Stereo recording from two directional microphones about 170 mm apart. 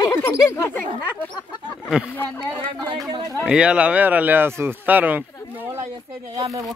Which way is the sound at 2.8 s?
25° right (ahead or behind).